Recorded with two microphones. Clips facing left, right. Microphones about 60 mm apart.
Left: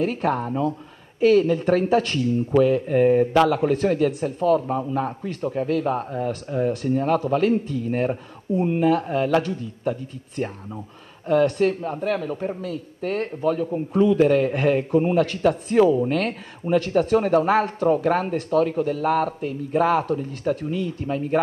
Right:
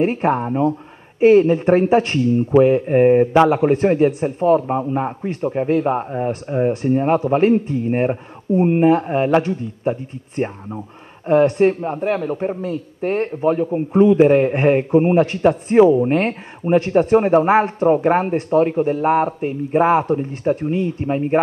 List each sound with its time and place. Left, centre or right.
0.0 s a man's voice: right